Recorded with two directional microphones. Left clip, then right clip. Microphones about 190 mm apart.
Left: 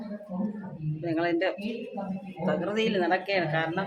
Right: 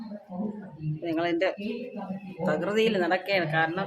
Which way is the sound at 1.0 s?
15° right (ahead or behind).